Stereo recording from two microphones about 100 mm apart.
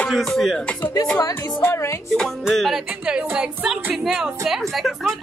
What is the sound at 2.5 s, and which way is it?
Speech, centre (ahead or behind).